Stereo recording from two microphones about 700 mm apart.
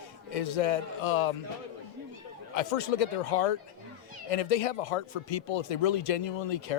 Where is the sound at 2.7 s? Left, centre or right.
Left.